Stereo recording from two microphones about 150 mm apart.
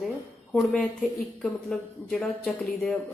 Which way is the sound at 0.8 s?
5° left (ahead or behind).